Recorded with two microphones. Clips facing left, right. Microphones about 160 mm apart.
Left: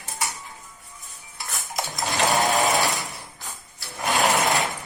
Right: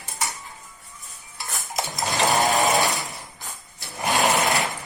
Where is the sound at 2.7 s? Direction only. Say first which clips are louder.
Right 1 dB; centre (ahead or behind).